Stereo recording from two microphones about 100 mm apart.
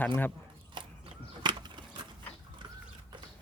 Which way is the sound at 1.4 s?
50° right (ahead or behind).